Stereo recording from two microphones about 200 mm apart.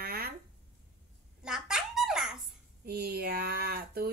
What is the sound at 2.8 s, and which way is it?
Speech, 50° right (ahead or behind).